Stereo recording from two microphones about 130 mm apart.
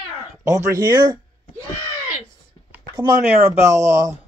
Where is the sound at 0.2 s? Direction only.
25° right (ahead or behind).